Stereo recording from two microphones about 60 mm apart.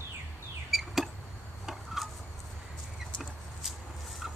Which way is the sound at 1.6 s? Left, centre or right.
Centre.